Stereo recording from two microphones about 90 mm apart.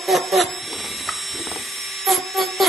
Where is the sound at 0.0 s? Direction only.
Centre (ahead or behind).